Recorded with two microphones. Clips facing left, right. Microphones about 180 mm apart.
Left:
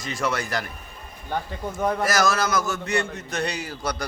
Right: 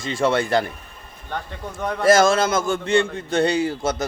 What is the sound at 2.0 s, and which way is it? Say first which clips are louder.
A man's voice: right 12 dB; 25° right (ahead or behind).